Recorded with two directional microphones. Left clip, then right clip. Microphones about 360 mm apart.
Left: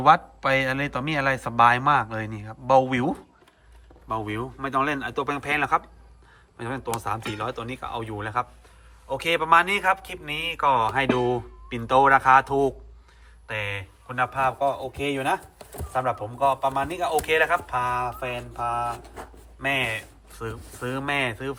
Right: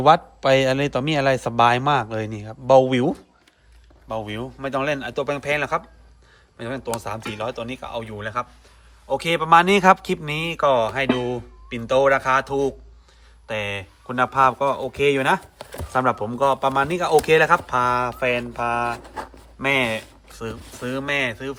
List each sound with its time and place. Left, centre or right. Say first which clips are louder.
0.0 s a man's voice: right 3 dB; centre